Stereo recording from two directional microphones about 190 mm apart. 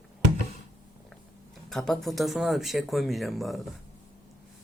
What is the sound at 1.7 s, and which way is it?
Speech, centre (ahead or behind).